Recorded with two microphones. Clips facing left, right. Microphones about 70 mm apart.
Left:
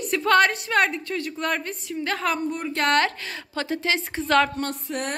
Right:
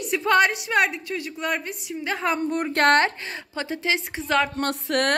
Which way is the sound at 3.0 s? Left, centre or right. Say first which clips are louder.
Right 1 dB; right.